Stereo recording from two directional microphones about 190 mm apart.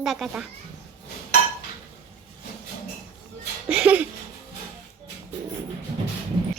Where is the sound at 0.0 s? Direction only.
Centre (ahead or behind).